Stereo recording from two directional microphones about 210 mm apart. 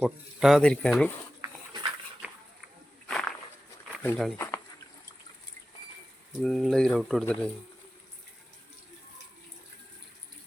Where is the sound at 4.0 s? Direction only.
5° left (ahead or behind).